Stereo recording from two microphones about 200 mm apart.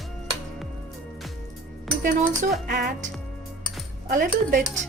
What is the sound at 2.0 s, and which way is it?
Speech, 50° right (ahead or behind).